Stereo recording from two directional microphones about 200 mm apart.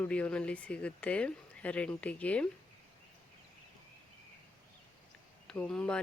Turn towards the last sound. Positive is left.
turn(degrees=5)  # may be behind; listen again after turning